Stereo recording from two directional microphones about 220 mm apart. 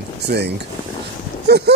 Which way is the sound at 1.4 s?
50° right (ahead or behind).